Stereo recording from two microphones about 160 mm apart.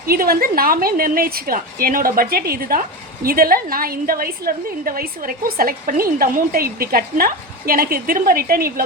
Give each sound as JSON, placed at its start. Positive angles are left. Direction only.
{"t": 0.1, "sound": "a woman's voice", "side_deg": -65}